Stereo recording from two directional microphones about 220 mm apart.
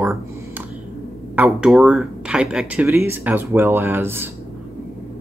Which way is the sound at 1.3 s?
5° right (ahead or behind).